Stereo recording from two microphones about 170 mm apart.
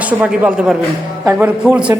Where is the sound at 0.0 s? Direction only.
10° right (ahead or behind).